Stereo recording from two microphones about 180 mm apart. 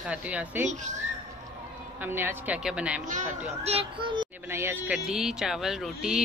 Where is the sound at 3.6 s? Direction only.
30° right (ahead or behind).